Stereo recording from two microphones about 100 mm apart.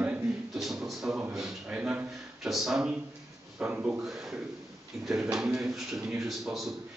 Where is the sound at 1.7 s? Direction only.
15° right (ahead or behind).